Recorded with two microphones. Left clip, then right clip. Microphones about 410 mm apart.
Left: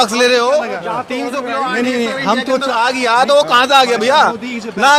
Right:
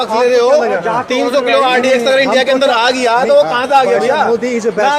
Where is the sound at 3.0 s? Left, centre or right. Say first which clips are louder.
Right 1 dB; left.